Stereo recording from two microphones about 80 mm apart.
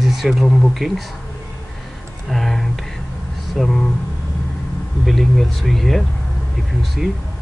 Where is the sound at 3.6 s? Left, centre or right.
Centre.